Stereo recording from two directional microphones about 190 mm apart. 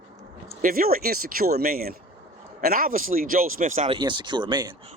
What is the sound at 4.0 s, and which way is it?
Speech, 25° right (ahead or behind).